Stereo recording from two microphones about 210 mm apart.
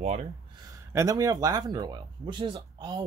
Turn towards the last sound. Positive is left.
turn(degrees=-20)  # may be behind; listen again after turning